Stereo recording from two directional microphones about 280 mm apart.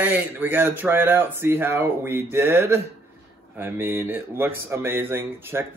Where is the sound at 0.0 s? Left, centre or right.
Centre.